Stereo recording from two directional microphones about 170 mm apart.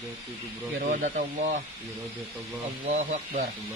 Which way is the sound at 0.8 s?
50° right (ahead or behind).